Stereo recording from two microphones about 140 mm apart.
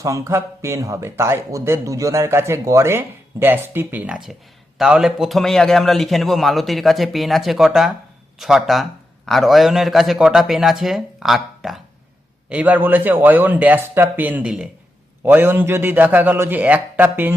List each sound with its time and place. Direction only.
0.0 s a man's voice: 20° right (ahead or behind)